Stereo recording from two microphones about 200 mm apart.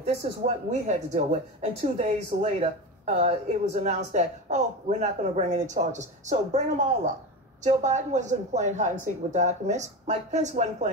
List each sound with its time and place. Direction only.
0.0 s speech: 35° right (ahead or behind)
7.6 s speech: 35° right (ahead or behind)